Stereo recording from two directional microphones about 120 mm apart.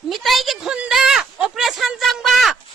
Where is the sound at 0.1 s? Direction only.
Centre (ahead or behind).